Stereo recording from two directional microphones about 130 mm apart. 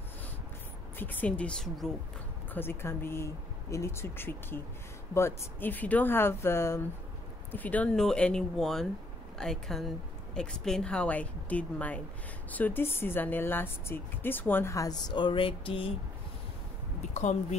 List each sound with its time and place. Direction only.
0.9 s speech: 10° left (ahead or behind)
2.5 s speech: 15° left (ahead or behind); by 15.9 s 45° left (ahead or behind)
17.1 s speech: 60° left (ahead or behind)